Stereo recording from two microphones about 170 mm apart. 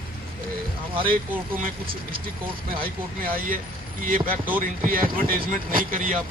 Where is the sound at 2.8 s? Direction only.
55° right (ahead or behind).